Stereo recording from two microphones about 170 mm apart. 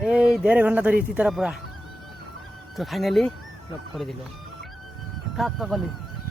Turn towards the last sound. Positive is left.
turn(degrees=0)  # may be behind; listen again after turning